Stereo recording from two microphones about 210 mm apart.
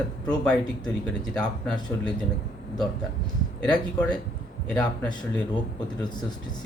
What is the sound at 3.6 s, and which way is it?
Speech, 5° left (ahead or behind).